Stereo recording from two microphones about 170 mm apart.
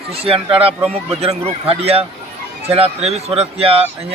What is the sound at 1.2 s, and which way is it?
A man's voice, 35° right (ahead or behind).